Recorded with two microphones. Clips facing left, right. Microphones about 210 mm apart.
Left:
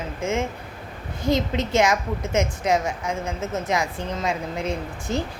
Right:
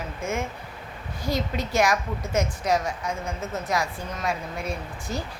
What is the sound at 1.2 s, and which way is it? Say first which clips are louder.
Speech: left 5 dB; 20° left (ahead or behind).